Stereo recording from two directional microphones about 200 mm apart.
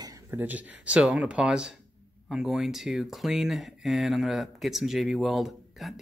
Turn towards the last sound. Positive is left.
turn(degrees=0)  # may be behind; listen again after turning